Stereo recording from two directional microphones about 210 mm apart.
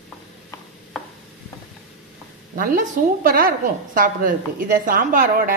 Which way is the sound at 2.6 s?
45° right (ahead or behind).